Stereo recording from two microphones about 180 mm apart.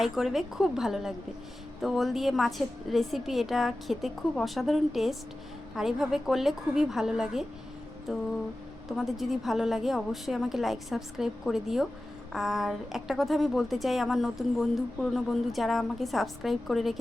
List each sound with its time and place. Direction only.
0.0 s speech: centre (ahead or behind)